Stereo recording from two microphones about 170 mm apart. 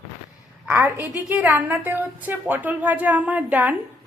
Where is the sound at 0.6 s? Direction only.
10° right (ahead or behind).